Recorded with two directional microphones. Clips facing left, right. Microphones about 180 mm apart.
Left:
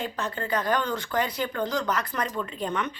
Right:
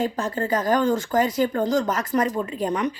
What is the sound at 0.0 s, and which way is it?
Speech, 45° right (ahead or behind).